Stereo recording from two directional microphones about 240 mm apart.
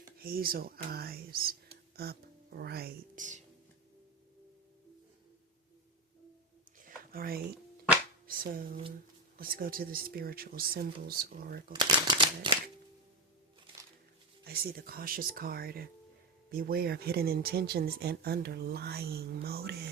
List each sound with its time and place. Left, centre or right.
0.2 s speech: right
6.8 s a sound: right
8.3 s speech: right
11.7 s shuffling cards: centre
14.4 s speech: right